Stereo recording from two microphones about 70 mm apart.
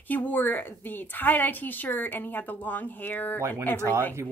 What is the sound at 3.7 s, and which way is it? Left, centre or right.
Speech, right.